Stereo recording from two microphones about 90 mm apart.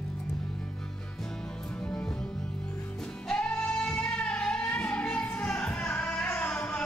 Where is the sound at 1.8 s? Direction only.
10° left (ahead or behind).